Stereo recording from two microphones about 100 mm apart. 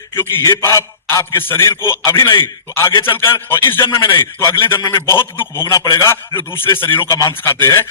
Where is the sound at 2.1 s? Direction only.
50° left (ahead or behind).